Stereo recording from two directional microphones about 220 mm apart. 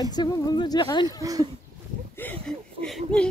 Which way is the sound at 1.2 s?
15° right (ahead or behind).